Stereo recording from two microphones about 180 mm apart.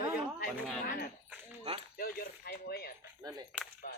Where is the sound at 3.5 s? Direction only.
5° right (ahead or behind).